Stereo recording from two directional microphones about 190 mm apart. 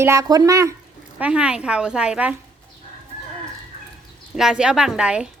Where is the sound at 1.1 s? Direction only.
5° right (ahead or behind).